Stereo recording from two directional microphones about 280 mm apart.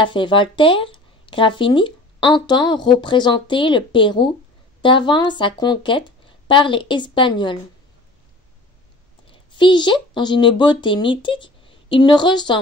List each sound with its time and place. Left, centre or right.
0.0 s speech: centre
9.3 s speech: centre